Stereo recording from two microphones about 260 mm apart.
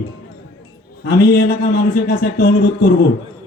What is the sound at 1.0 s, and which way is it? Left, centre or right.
A man's voice, left.